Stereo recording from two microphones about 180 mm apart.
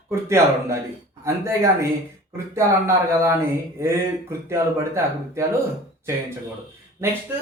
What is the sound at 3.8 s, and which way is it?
Speech, 15° right (ahead or behind).